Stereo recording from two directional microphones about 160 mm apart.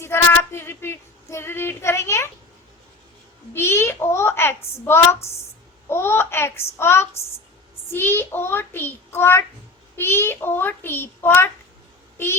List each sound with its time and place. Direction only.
0.0 s female singing: 15° left (ahead or behind)
3.5 s female singing: 15° left (ahead or behind)
12.1 s a sound: 15° left (ahead or behind)